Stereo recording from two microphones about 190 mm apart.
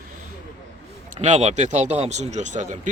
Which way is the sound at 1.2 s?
35° right (ahead or behind).